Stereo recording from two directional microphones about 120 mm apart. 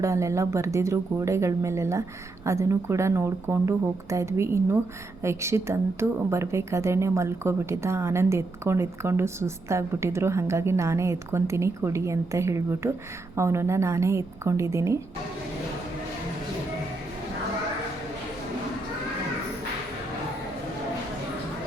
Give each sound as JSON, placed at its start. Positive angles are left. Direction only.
{"t": 0.0, "sound": "a woman's voice", "side_deg": -25}